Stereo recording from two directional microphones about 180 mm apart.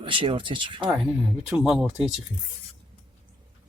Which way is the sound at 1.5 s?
5° right (ahead or behind).